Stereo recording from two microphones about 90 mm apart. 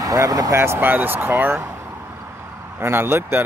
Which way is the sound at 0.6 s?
25° right (ahead or behind).